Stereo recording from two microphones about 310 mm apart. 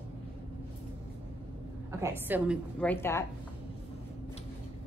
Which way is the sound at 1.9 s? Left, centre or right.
Centre.